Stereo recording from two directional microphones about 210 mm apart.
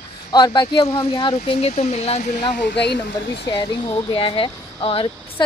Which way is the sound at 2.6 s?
50° left (ahead or behind).